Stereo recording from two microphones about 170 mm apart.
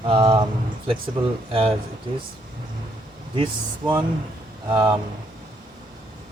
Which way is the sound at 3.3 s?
25° right (ahead or behind).